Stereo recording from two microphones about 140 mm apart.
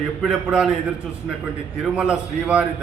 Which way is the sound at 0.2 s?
5° right (ahead or behind).